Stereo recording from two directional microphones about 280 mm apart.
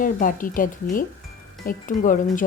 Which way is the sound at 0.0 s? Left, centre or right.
Left.